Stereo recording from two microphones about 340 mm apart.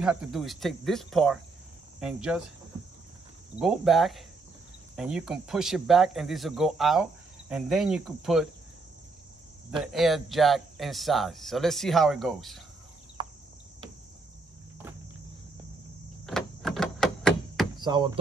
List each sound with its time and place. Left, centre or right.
0.0 s speech: centre
3.5 s speech: centre
9.7 s speech: centre
13.2 s a sound: centre
16.3 s a sound: centre
17.7 s speech: centre